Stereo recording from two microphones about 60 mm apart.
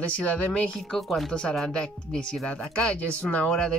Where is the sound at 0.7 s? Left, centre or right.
Centre.